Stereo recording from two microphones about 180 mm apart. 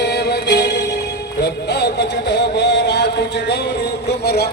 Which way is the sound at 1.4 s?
70° left (ahead or behind).